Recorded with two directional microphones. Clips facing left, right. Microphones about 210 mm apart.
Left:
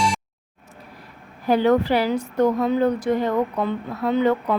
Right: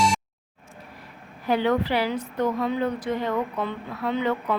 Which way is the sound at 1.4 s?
40° left (ahead or behind).